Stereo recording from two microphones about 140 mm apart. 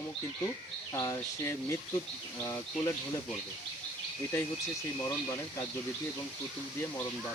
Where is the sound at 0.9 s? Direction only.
25° left (ahead or behind).